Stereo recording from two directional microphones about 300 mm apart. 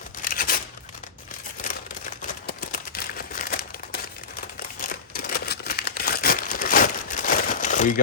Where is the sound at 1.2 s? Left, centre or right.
Left.